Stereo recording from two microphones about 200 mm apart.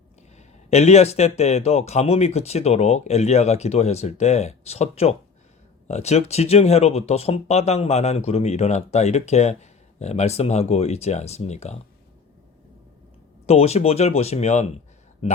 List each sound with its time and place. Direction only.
0.3 s speech: 35° left (ahead or behind)
13.5 s speech: 30° left (ahead or behind)